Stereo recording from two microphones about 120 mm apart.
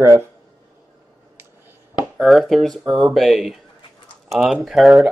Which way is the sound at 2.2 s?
Centre (ahead or behind).